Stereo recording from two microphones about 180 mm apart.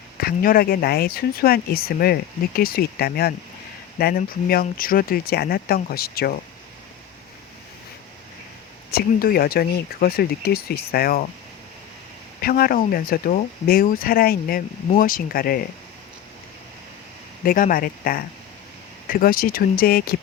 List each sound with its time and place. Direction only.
0.2 s speech: 55° left (ahead or behind)
8.9 s speech: 55° left (ahead or behind)
12.4 s speech: 55° left (ahead or behind)
17.4 s speech: 50° left (ahead or behind)